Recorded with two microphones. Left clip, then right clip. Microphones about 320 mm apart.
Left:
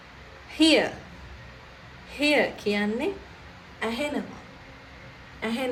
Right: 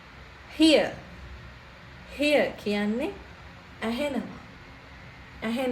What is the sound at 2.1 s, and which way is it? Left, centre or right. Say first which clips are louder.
Speech: even; left.